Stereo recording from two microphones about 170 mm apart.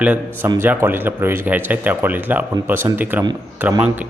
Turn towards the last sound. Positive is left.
turn(degrees=-15)  # may be behind; listen again after turning